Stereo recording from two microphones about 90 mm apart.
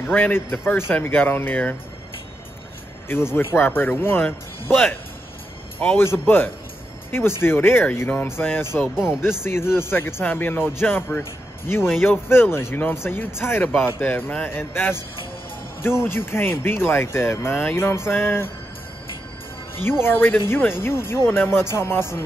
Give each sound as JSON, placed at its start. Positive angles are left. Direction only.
{"t": 0.0, "sound": "speech", "side_deg": 20}
{"t": 3.1, "sound": "speech", "side_deg": 25}
{"t": 5.8, "sound": "a man's voice", "side_deg": 20}
{"t": 8.7, "sound": "speech", "side_deg": -5}
{"t": 9.4, "sound": "speech", "side_deg": 25}
{"t": 16.0, "sound": "speech", "side_deg": 25}
{"t": 19.8, "sound": "speech", "side_deg": 25}